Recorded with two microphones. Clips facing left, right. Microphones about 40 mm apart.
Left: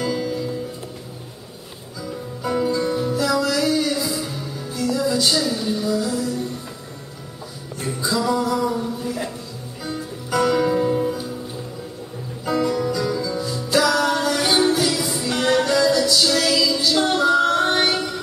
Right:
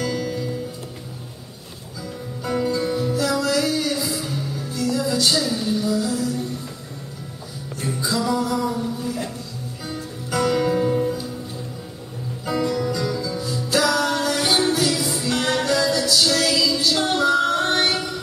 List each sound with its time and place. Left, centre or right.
0.0 s music: centre
2.4 s music: centre
7.8 s music: centre
12.4 s music: centre